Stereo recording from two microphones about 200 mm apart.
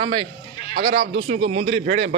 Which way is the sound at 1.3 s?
30° right (ahead or behind).